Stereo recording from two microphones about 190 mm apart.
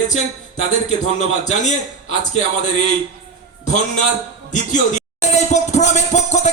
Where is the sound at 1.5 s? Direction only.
40° left (ahead or behind).